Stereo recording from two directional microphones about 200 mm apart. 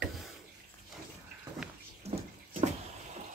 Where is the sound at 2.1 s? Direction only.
30° right (ahead or behind).